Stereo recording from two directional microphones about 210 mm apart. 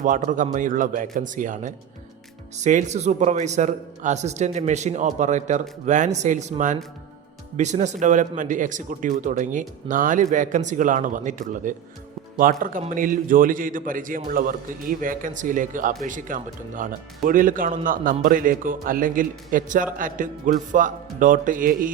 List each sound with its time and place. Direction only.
0.0 s speech: 40° right (ahead or behind)